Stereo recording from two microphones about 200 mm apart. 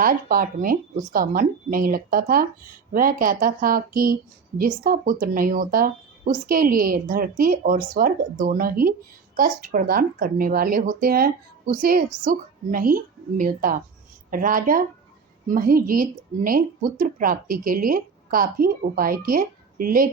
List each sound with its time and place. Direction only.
0.0 s a woman's voice: 45° right (ahead or behind)